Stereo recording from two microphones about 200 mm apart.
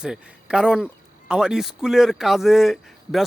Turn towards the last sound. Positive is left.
turn(degrees=0)  # may be behind; listen again after turning